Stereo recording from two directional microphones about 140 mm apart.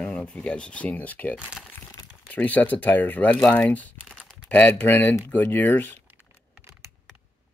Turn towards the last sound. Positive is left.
turn(degrees=15)  # may be behind; listen again after turning